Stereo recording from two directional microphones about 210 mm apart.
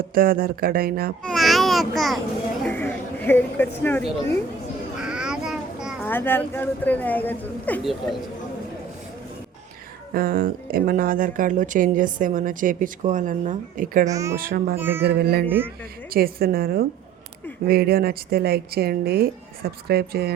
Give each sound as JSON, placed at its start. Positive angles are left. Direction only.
{"t": 0.0, "sound": "speech", "side_deg": -45}
{"t": 1.2, "sound": "a child's voice", "side_deg": 0}
{"t": 4.9, "sound": "a sound", "side_deg": -5}
{"t": 6.1, "sound": "speech", "side_deg": 10}
{"t": 10.2, "sound": "speech", "side_deg": -45}
{"t": 14.1, "sound": "speech", "side_deg": -15}
{"t": 14.3, "sound": "speech", "side_deg": -45}
{"t": 14.8, "sound": "speech", "side_deg": -10}
{"t": 15.0, "sound": "speech", "side_deg": -50}
{"t": 15.4, "sound": "speech", "side_deg": -10}
{"t": 16.0, "sound": "speech", "side_deg": -45}